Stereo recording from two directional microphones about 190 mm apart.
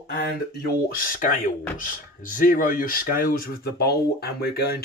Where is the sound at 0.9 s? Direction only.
50° left (ahead or behind).